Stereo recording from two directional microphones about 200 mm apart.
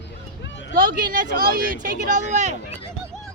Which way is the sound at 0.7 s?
45° right (ahead or behind).